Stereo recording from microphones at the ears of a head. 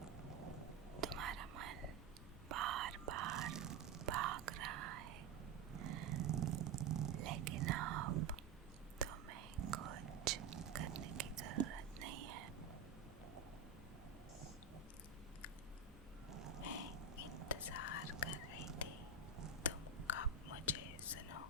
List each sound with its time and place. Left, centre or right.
0.6 s whispering: right
5.7 s a sound: right
9.0 s whispering: right
16.3 s a sound: right
17.6 s whispering: left
20.1 s whispering: left